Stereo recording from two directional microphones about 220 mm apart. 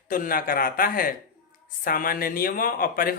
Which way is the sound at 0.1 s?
40° left (ahead or behind).